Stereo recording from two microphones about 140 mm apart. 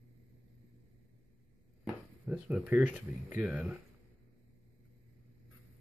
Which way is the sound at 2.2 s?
10° right (ahead or behind).